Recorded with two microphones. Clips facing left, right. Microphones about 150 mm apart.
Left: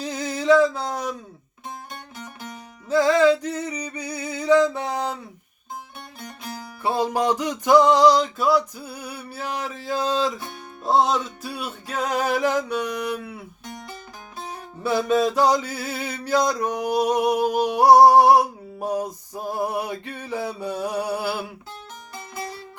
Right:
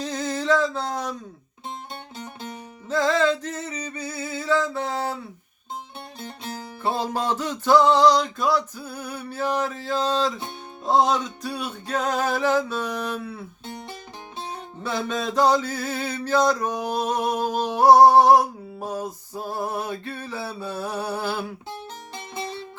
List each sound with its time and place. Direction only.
0.0 s a sound: 10° left (ahead or behind)
2.1 s music: 25° right (ahead or behind)
2.9 s mantra: 10° left (ahead or behind)
6.1 s music: 25° right (ahead or behind)
6.8 s mantra: 10° left (ahead or behind)
14.8 s mantra: 10° left (ahead or behind)
21.7 s music: 25° right (ahead or behind)